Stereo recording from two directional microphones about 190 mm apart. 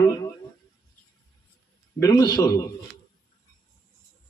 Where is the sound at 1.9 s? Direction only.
20° left (ahead or behind).